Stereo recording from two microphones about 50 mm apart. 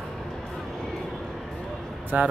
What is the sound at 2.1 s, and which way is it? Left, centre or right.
Speech, right.